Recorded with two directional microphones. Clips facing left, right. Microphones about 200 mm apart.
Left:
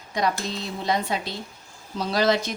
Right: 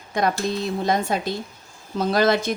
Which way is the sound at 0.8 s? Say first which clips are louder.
Right 1 dB; 50° right (ahead or behind).